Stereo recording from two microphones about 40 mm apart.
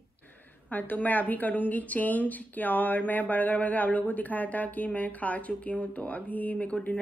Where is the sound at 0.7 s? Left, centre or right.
Left.